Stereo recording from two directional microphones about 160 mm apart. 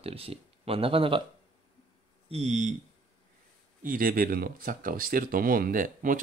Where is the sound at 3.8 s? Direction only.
60° right (ahead or behind).